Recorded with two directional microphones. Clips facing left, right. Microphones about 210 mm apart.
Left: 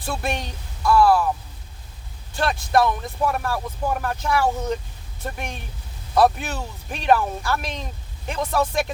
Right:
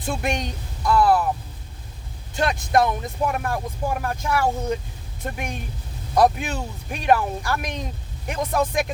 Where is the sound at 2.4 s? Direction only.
20° right (ahead or behind).